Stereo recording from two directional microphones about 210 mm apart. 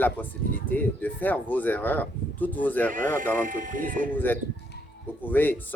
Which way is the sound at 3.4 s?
40° right (ahead or behind).